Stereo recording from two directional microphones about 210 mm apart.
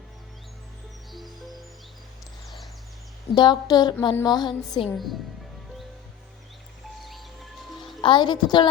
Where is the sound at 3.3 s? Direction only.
20° left (ahead or behind).